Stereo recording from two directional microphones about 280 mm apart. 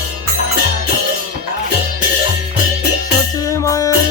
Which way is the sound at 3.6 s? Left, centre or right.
Centre.